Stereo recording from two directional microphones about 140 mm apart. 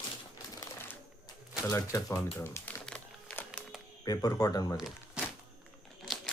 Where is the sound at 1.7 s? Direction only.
25° left (ahead or behind).